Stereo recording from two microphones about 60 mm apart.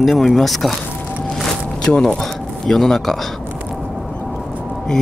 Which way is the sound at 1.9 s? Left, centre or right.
Left.